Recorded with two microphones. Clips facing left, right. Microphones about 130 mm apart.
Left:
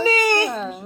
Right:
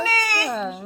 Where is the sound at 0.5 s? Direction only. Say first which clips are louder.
Right 1 dB; centre (ahead or behind).